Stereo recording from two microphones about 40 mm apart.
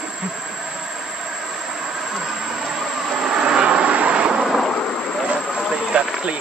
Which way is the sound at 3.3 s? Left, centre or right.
Right.